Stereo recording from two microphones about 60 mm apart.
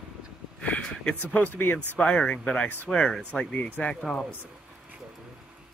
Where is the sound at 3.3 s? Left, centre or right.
Centre.